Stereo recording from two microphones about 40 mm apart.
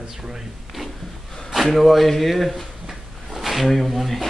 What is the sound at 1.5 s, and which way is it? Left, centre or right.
Speech, centre.